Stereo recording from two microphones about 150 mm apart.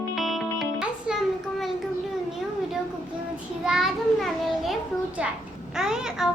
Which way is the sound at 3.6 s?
5° right (ahead or behind).